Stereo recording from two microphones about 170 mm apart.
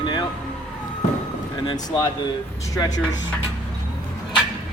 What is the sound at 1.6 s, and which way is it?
Speech, 25° left (ahead or behind).